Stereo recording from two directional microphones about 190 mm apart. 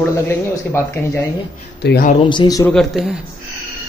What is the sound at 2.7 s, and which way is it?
Speech, centre (ahead or behind).